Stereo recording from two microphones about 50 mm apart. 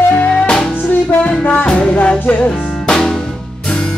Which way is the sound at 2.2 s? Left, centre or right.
Left.